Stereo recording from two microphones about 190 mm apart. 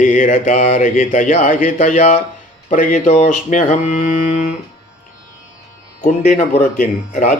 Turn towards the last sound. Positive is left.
turn(degrees=45)  # may be behind; listen again after turning